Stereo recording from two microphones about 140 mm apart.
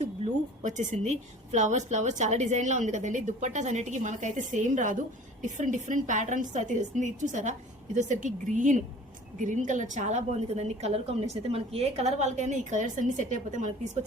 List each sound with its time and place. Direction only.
0.6 s a woman's voice: 60° right (ahead or behind)